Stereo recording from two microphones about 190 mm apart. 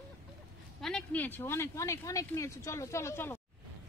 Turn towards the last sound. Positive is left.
turn(degrees=15)  # may be behind; listen again after turning